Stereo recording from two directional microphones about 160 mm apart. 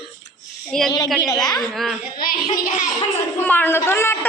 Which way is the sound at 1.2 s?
25° left (ahead or behind).